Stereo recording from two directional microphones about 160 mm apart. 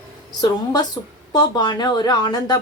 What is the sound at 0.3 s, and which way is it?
A woman's voice, 25° left (ahead or behind).